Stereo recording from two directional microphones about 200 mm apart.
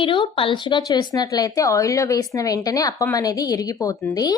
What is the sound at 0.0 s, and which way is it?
A woman's voice, 25° left (ahead or behind).